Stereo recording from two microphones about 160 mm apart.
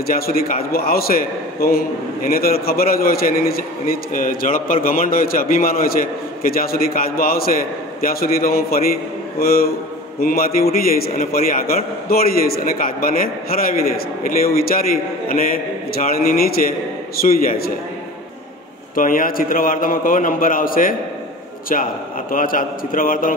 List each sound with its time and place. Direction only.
0.0 s a man's voice: 65° left (ahead or behind)
18.9 s a man's voice: 60° left (ahead or behind)
22.3 s a man's voice: 60° left (ahead or behind)